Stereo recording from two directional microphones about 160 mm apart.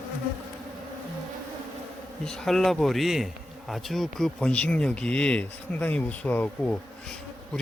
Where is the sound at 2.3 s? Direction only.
Centre (ahead or behind).